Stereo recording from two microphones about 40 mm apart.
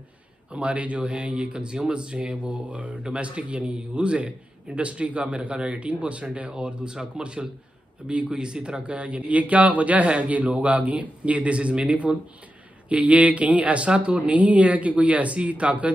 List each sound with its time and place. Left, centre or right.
0.5 s a man's voice: right
2.7 s speech: right
3.0 s a man's voice: right